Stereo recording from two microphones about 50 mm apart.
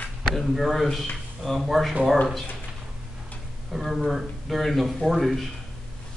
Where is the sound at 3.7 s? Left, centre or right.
Centre.